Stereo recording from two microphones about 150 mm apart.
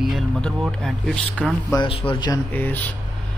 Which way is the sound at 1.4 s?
5° left (ahead or behind).